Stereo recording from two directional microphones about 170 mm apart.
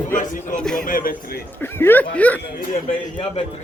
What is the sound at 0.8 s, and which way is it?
Speech, 55° left (ahead or behind).